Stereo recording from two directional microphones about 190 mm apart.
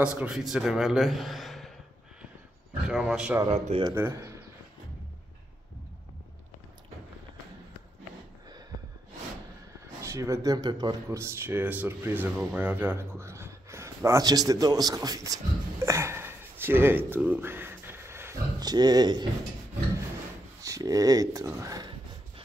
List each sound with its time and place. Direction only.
0.0 s a man's voice: 5° right (ahead or behind)
2.9 s a man's voice: centre (ahead or behind)
3.4 s speech: 35° right (ahead or behind)
3.9 s speech: 15° right (ahead or behind)
10.0 s speech: 15° right (ahead or behind)
20.6 s speech: 20° right (ahead or behind)